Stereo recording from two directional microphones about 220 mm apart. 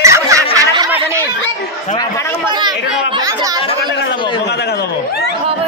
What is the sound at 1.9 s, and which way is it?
Speech, 15° left (ahead or behind).